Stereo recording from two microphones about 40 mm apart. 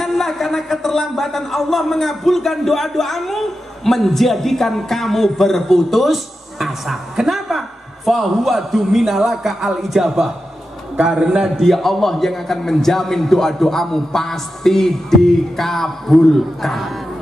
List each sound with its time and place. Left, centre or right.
0.0 s speech: centre
11.0 s a man's voice: right
11.6 s a man's voice: centre